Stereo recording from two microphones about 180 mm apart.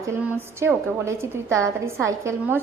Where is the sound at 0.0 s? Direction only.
10° right (ahead or behind).